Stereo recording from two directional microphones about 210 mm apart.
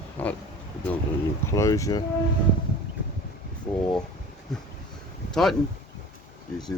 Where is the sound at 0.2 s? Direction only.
5° left (ahead or behind).